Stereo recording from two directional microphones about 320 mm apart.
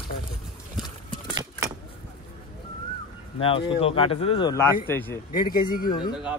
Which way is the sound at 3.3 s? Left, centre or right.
Centre.